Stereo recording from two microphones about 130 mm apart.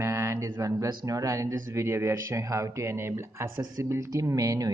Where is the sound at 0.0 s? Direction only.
20° right (ahead or behind).